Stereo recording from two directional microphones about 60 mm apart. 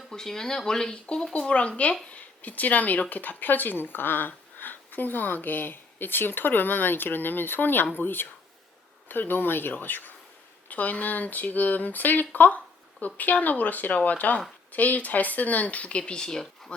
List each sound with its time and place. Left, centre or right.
0.1 s speech: centre